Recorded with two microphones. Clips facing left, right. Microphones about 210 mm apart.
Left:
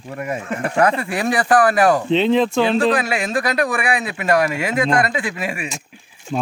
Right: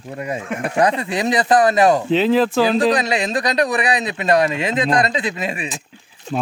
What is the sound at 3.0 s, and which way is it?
Speech, 20° right (ahead or behind).